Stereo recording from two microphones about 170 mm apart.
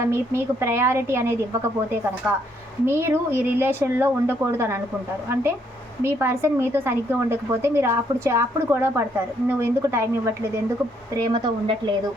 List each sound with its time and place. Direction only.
0.0 s a woman's voice: 15° right (ahead or behind)
11.2 s speech: 30° right (ahead or behind)